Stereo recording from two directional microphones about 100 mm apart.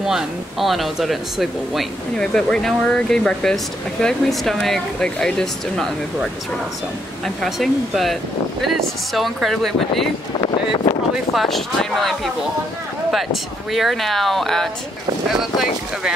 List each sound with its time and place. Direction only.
0.0 s speech: 5° right (ahead or behind)
7.2 s speech: centre (ahead or behind)
10.4 s a sound: 55° left (ahead or behind)
11.3 s speech: centre (ahead or behind)